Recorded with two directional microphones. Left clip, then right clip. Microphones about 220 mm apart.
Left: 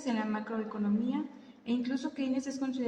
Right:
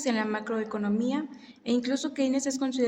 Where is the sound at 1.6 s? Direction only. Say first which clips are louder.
Right 6 dB; 50° right (ahead or behind).